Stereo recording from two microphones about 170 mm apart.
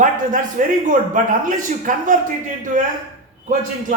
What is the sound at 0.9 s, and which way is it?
A man's voice, 50° right (ahead or behind).